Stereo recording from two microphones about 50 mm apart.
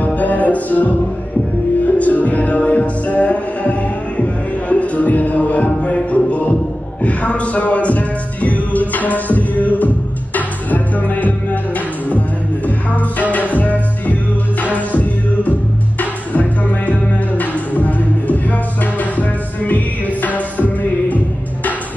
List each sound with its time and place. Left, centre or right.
0.0 s music: left